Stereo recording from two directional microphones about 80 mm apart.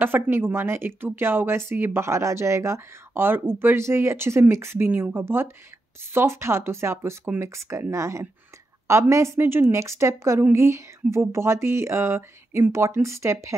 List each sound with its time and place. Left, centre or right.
0.0 s speech: right